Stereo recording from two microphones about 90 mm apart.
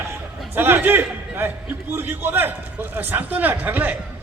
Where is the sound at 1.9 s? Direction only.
25° right (ahead or behind).